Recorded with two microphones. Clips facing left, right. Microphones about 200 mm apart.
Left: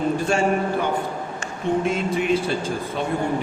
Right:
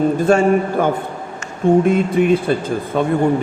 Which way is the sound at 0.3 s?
55° right (ahead or behind).